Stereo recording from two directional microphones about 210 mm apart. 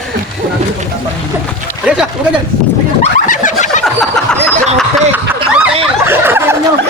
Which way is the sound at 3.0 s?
35° left (ahead or behind).